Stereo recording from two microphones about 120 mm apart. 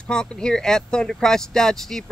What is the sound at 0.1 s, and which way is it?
Speech, 5° left (ahead or behind).